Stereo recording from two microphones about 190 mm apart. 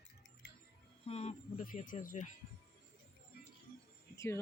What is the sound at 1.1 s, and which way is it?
Speech, 35° left (ahead or behind).